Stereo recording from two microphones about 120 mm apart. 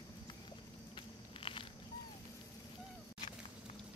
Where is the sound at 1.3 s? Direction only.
50° left (ahead or behind).